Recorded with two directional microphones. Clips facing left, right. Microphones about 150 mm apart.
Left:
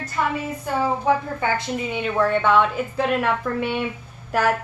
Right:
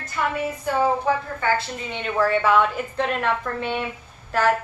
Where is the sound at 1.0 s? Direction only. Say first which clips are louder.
Left 2 dB; 15° left (ahead or behind).